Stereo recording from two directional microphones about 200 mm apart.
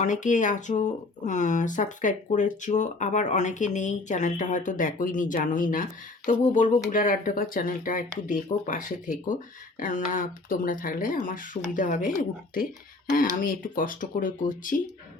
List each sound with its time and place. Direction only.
0.0 s speech: 40° left (ahead or behind)